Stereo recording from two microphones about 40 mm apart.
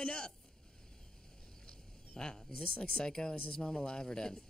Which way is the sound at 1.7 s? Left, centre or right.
Centre.